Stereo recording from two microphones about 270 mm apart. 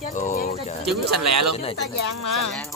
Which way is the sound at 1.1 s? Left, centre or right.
Right.